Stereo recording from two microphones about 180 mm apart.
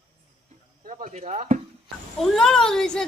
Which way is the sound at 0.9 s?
40° right (ahead or behind).